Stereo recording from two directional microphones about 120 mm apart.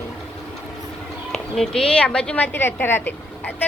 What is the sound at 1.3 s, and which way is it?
A woman's voice, 5° left (ahead or behind).